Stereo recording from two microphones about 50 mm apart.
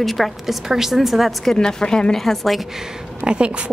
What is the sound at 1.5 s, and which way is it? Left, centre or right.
Speech, centre.